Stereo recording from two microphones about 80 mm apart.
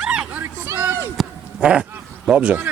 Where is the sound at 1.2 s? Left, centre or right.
Centre.